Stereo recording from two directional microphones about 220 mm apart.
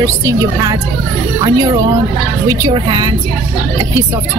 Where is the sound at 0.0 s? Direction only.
15° right (ahead or behind).